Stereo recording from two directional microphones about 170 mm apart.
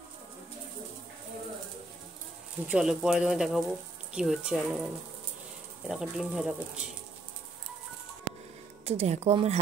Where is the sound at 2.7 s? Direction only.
5° right (ahead or behind).